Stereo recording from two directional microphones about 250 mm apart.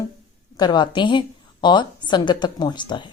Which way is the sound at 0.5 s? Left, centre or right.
Centre.